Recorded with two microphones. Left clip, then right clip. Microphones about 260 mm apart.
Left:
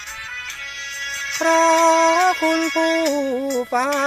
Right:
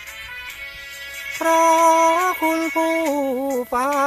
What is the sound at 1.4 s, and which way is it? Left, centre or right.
Music, centre.